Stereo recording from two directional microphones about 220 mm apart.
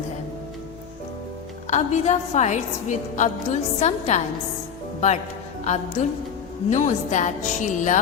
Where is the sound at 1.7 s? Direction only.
30° left (ahead or behind).